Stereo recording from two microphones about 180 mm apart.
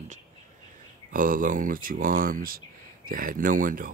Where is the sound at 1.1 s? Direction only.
50° right (ahead or behind).